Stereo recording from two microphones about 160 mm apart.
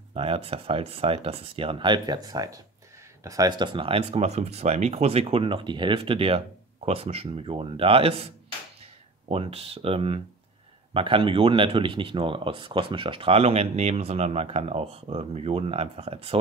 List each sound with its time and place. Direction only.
0.1 s speech: 35° right (ahead or behind)
9.3 s speech: 40° right (ahead or behind)